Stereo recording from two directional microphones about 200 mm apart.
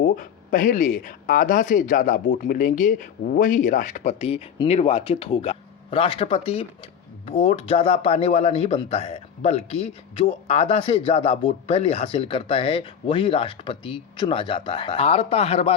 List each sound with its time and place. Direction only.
0.0 s speech: 45° left (ahead or behind)